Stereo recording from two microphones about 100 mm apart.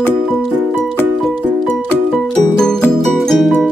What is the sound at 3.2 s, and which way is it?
Music, 5° left (ahead or behind).